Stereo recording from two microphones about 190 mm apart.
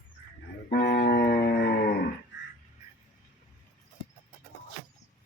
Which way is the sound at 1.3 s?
55° left (ahead or behind).